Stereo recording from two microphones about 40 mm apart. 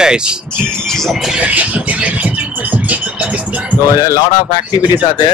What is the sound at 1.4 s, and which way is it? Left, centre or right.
Music, right.